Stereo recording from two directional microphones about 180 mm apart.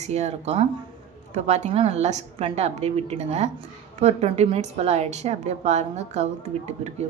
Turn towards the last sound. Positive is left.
turn(degrees=-40)  # may be behind; listen again after turning